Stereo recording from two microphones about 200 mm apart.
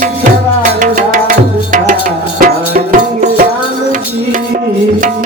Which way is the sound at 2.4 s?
45° right (ahead or behind).